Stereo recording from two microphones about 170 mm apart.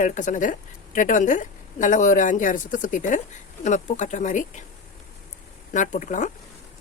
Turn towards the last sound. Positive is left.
turn(degrees=45)  # may be behind; listen again after turning